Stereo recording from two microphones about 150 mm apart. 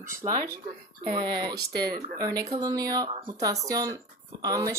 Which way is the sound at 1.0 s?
30° right (ahead or behind).